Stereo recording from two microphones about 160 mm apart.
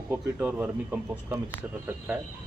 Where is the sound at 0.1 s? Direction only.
10° right (ahead or behind).